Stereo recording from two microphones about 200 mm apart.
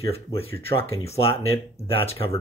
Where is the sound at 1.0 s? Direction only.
30° left (ahead or behind).